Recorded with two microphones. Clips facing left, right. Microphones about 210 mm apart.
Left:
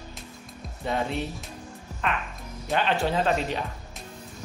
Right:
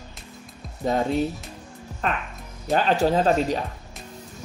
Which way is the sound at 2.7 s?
40° right (ahead or behind).